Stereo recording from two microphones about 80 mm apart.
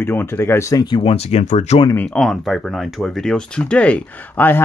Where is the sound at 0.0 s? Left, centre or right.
Left.